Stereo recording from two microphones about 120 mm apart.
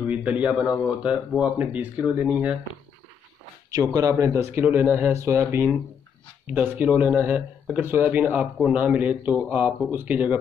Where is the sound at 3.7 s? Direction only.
30° right (ahead or behind); by 10.4 s 10° right (ahead or behind).